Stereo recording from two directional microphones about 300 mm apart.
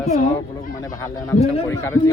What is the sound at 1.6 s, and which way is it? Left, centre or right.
Speech, centre.